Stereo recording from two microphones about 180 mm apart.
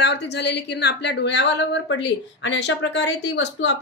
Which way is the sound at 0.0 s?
70° left (ahead or behind).